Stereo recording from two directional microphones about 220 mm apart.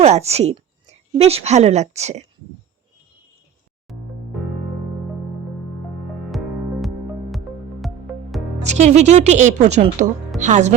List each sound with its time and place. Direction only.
0.0 s a woman's voice: 30° right (ahead or behind)
3.9 s music: centre (ahead or behind)
6.8 s music: centre (ahead or behind)
8.6 s speech: 30° right (ahead or behind)